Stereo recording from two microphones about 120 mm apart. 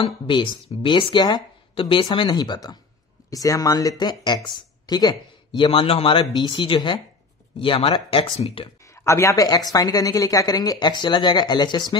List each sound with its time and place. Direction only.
0.0 s speech: 45° left (ahead or behind)
5.6 s speech: 50° left (ahead or behind)
8.9 s speech: 25° left (ahead or behind)